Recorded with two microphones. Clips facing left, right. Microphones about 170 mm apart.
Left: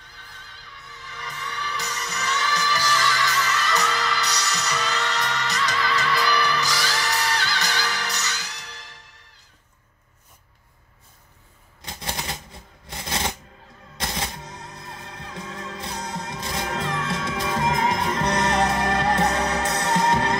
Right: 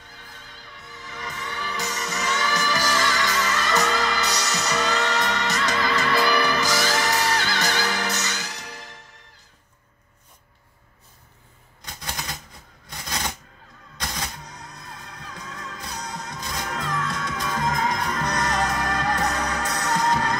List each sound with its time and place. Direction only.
1.0 s music: 50° right (ahead or behind)
11.8 s typewriter: 25° left (ahead or behind)
13.9 s music: 25° left (ahead or behind)